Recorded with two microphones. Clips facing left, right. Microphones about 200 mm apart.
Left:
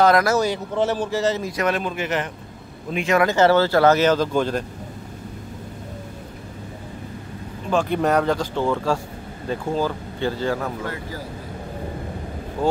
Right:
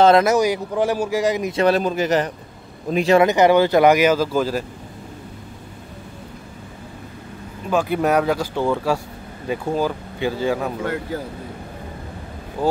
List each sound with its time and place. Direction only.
0.0 s speech: 25° right (ahead or behind)
1.5 s speech: 30° right (ahead or behind)
3.2 s speech: 15° right (ahead or behind)
7.7 s speech: 5° right (ahead or behind)